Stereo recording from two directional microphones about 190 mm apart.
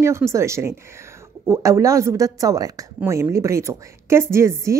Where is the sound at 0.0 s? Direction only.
15° right (ahead or behind).